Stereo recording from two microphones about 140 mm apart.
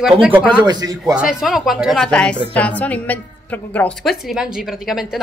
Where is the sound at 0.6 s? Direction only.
30° right (ahead or behind).